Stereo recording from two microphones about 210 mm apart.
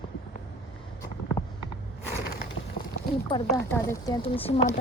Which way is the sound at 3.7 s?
15° left (ahead or behind).